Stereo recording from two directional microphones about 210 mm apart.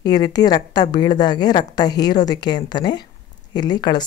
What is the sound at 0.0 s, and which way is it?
A woman's voice, 20° left (ahead or behind).